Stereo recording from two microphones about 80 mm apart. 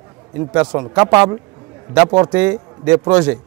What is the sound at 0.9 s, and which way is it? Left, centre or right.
Speech, right.